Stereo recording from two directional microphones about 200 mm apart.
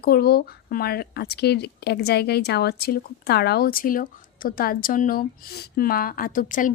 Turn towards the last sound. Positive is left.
turn(degrees=40)  # may be behind; listen again after turning